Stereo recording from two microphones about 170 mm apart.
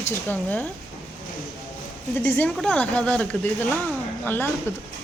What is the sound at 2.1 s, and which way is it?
Speech, 10° left (ahead or behind).